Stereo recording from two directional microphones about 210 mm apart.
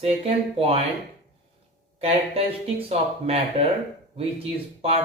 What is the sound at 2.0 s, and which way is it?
Speech, 30° right (ahead or behind).